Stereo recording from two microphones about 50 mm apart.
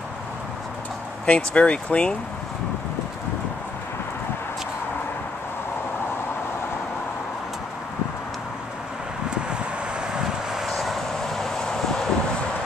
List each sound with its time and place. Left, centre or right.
1.2 s speech: left
10.1 s vehicle: centre